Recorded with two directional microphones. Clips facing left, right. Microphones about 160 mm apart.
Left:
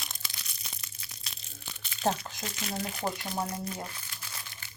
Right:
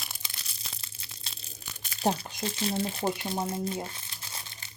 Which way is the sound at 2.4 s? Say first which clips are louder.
Right 6 dB; 30° right (ahead or behind).